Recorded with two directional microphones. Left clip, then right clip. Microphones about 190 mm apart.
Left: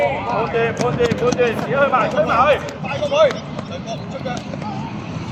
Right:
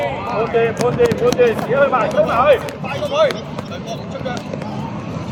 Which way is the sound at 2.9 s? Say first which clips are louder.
Left 1 dB; 5° left (ahead or behind).